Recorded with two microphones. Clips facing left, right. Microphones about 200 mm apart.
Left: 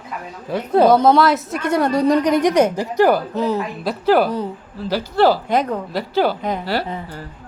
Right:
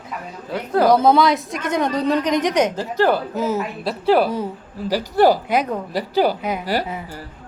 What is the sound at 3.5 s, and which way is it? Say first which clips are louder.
Speech: left 1 dB; centre (ahead or behind).